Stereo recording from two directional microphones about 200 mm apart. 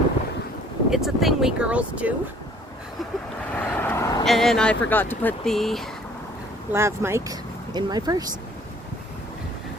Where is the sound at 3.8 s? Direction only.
10° left (ahead or behind).